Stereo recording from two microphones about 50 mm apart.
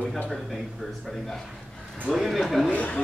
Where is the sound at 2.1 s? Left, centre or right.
Centre.